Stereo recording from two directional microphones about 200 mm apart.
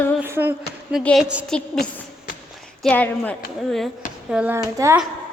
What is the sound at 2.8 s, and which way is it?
Speech, 5° left (ahead or behind).